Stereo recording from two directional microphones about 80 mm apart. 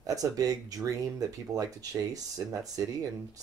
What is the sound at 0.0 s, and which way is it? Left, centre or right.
Speech, right.